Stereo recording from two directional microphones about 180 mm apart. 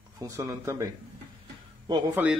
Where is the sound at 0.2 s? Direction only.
15° right (ahead or behind).